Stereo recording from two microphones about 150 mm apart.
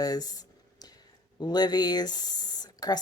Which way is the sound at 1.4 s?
30° left (ahead or behind).